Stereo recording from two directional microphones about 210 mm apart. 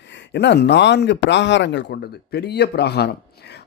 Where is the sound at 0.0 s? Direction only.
55° left (ahead or behind).